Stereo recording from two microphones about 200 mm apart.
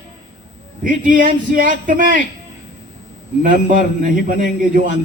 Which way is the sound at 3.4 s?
40° right (ahead or behind).